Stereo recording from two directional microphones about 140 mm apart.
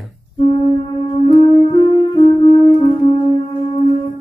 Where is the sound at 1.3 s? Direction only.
40° left (ahead or behind).